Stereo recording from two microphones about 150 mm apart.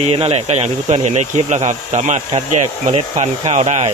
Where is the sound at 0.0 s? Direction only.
40° right (ahead or behind).